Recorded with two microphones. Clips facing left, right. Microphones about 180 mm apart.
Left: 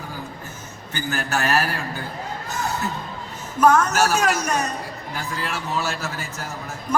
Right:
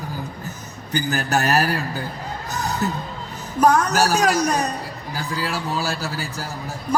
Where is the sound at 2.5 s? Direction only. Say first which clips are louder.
Right 2 dB; 40° right (ahead or behind).